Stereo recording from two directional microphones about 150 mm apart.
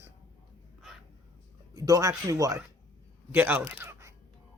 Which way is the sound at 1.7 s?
25° right (ahead or behind).